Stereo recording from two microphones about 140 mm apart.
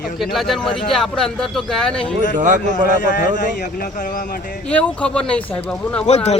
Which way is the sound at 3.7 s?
70° left (ahead or behind).